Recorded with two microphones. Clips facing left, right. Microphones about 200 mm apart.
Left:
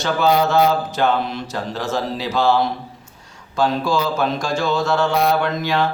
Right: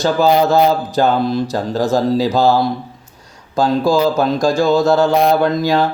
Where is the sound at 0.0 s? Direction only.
35° right (ahead or behind).